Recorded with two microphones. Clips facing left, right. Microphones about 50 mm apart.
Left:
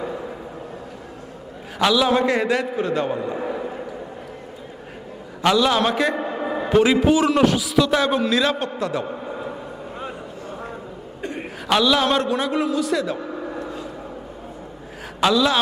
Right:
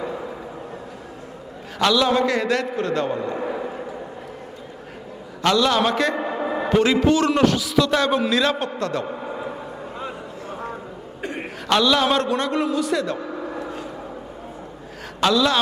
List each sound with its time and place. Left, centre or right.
1.8 s a man's voice: centre
2.2 s a man's voice: centre
5.4 s a man's voice: centre
9.2 s a sound: centre
11.2 s chuckle: right
11.7 s a man's voice: centre
13.5 s a sound: right
15.2 s a man's voice: centre